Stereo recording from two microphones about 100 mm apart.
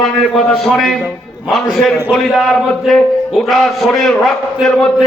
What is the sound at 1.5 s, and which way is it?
A man's voice, centre (ahead or behind).